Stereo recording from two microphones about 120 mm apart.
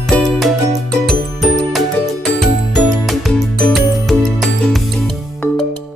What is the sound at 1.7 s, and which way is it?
Music, centre (ahead or behind).